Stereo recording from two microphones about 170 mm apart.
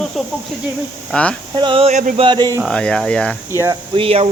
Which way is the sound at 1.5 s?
30° right (ahead or behind).